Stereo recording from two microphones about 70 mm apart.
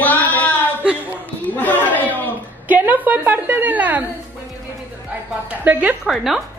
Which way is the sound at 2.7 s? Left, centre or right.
Right.